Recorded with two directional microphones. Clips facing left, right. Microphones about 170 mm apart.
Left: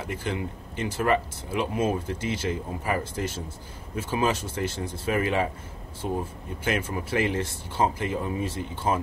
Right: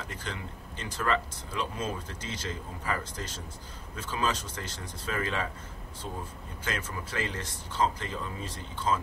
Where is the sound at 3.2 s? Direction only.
20° left (ahead or behind).